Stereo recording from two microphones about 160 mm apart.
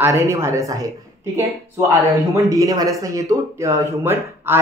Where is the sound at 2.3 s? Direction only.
20° right (ahead or behind).